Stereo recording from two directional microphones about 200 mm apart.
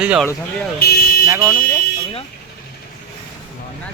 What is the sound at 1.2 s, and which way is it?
Speech, 20° right (ahead or behind).